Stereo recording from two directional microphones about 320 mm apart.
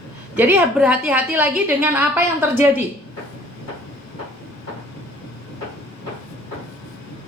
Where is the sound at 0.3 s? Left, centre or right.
Centre.